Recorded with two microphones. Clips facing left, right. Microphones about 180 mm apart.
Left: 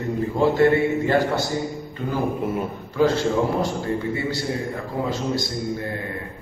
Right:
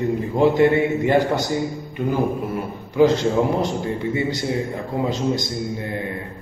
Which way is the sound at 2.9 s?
20° right (ahead or behind).